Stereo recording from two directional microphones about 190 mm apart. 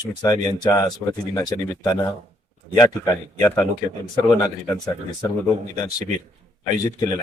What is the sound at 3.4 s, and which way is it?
Speech, 10° left (ahead or behind).